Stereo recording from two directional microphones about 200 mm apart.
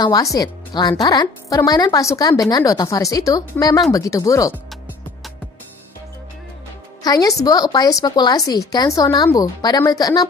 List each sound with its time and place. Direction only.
0.0 s speech: 20° left (ahead or behind)
7.0 s speech: 20° left (ahead or behind)